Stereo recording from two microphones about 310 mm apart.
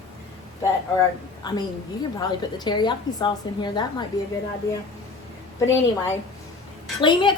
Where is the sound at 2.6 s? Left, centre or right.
Centre.